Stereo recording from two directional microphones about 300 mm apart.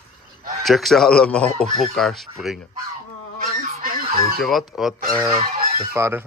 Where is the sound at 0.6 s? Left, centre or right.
Centre.